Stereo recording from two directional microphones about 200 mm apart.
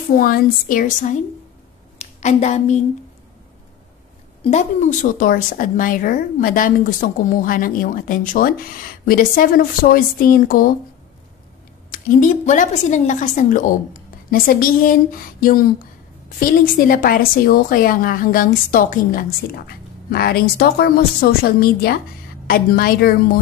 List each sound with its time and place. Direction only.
0.1 s a woman's voice: 45° left (ahead or behind)
4.4 s a woman's voice: 35° left (ahead or behind)
11.9 s a woman's voice: 40° left (ahead or behind)